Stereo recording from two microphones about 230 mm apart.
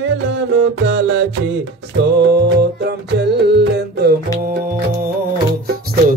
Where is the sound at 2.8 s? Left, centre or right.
Right.